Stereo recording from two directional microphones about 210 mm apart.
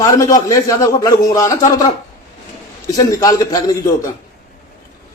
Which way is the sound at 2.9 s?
15° left (ahead or behind).